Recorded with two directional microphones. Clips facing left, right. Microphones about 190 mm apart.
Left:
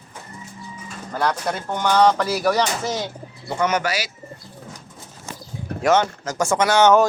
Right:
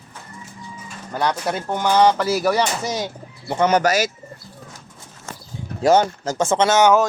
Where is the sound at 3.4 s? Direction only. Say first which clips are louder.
Right 4 dB; 30° right (ahead or behind).